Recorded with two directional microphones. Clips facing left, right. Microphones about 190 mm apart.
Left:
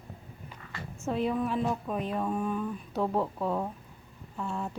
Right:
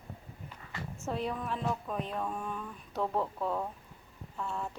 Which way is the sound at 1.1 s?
5° left (ahead or behind).